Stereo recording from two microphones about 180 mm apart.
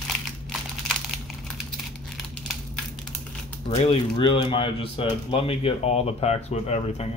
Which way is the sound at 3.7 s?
35° left (ahead or behind).